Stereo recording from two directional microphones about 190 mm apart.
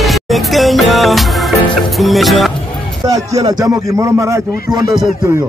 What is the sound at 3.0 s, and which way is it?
A man's voice, 15° right (ahead or behind).